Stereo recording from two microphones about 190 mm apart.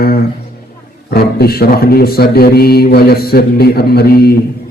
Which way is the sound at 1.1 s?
55° left (ahead or behind).